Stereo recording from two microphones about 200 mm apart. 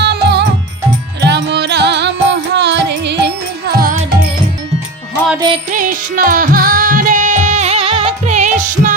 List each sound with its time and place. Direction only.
0.0 s music: 55° right (ahead or behind)
5.7 s music: 45° right (ahead or behind)